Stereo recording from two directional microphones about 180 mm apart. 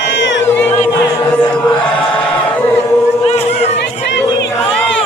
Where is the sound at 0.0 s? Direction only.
90° left.